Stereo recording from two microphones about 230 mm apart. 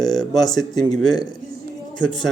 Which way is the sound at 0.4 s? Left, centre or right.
Centre.